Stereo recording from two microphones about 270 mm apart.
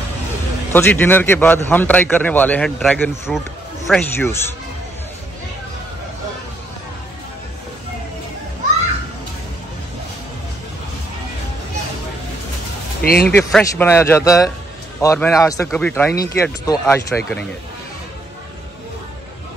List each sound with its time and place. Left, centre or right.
0.7 s a man's voice: centre
13.0 s speech: left
13.3 s a man's voice: centre